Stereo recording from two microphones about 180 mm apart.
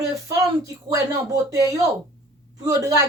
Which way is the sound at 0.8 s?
20° right (ahead or behind).